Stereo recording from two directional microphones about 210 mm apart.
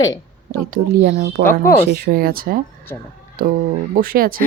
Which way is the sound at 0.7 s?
45° right (ahead or behind).